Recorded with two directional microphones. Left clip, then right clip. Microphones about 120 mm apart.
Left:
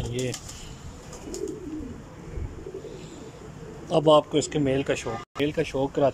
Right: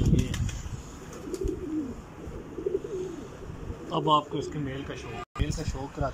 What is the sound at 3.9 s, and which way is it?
Speech, 50° left (ahead or behind).